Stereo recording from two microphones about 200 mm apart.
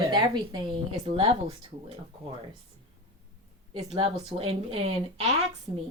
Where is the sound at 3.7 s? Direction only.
30° right (ahead or behind).